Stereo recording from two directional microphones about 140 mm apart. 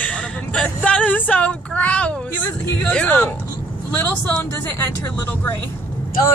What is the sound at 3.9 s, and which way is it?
Speech, 15° left (ahead or behind).